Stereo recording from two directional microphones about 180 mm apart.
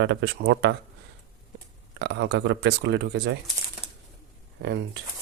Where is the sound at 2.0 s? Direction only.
70° right (ahead or behind).